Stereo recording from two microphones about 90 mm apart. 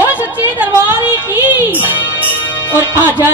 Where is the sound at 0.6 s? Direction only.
20° right (ahead or behind).